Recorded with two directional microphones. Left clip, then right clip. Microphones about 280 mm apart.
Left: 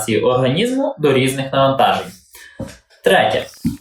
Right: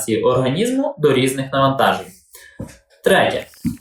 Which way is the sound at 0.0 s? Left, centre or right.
Centre.